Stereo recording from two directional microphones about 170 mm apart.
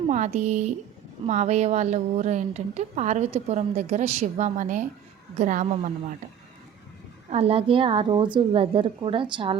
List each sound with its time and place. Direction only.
0.1 s a woman's voice: 45° right (ahead or behind)
7.3 s a woman's voice: 35° right (ahead or behind)